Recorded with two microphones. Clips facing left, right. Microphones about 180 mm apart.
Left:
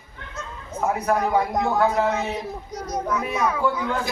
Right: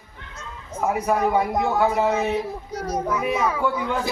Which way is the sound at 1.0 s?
5° right (ahead or behind).